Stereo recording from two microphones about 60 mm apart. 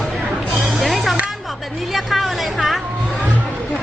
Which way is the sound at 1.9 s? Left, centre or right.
Centre.